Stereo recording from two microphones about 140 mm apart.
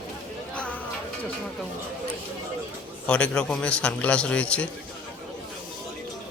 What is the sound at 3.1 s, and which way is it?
A man's voice, 10° left (ahead or behind).